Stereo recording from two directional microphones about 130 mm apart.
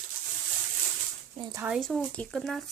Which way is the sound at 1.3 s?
35° right (ahead or behind).